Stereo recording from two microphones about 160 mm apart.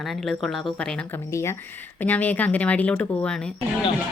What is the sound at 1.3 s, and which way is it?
Speech, 15° left (ahead or behind).